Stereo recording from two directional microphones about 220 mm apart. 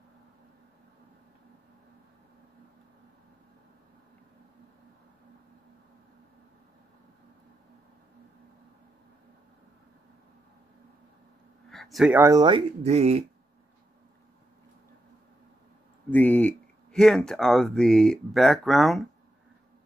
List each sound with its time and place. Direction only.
11.7 s speech: centre (ahead or behind); by 13.2 s 30° right (ahead or behind)
16.1 s speech: 5° left (ahead or behind)